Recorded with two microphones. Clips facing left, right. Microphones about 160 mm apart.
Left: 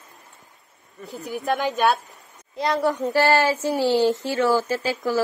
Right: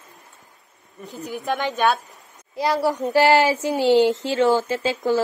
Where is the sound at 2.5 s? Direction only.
5° right (ahead or behind).